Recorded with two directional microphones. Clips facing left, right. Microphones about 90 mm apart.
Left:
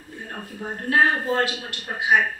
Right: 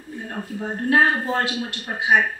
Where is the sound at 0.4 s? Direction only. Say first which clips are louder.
Right 6 dB; 20° right (ahead or behind).